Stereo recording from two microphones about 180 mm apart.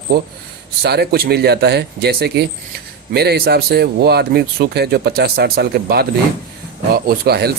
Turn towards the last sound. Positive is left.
turn(degrees=-60)  # may be behind; listen again after turning